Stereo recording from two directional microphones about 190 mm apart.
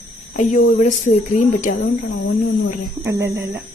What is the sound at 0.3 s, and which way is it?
Speech, 40° left (ahead or behind).